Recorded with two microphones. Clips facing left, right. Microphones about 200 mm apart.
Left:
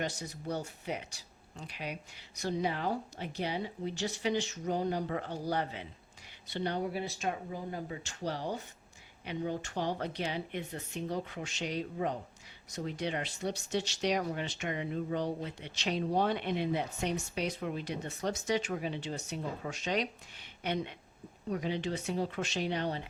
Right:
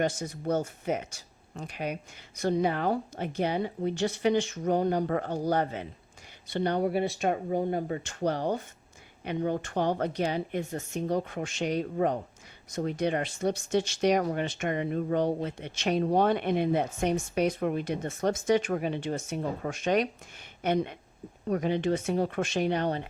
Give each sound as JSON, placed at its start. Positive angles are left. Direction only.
{"t": 0.0, "sound": "speech", "side_deg": -50}
{"t": 21.4, "sound": "speech", "side_deg": -55}